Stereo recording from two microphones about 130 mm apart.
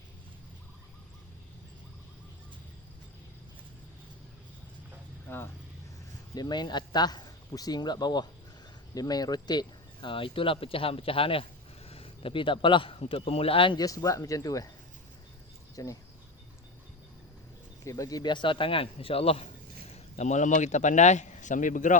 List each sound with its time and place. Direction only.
5.3 s speech: 15° left (ahead or behind)
6.3 s a man's voice: 30° left (ahead or behind)
13.7 s speech: 25° left (ahead or behind)
15.7 s speech: 25° left (ahead or behind)
17.8 s a man's voice: 25° left (ahead or behind); by 21.9 s 80° left